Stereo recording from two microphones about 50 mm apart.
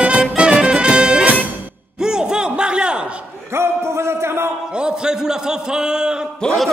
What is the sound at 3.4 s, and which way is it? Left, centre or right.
Music, right.